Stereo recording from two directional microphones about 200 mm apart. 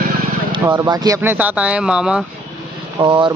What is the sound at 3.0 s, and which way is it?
Speech, 25° right (ahead or behind).